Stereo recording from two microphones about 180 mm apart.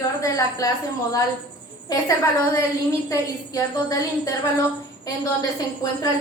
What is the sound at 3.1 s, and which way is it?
A woman's voice, 20° left (ahead or behind).